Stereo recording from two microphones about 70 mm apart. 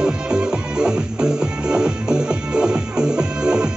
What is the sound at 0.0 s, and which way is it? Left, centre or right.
Music, centre.